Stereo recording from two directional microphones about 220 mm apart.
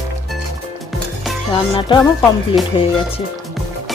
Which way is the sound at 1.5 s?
20° left (ahead or behind).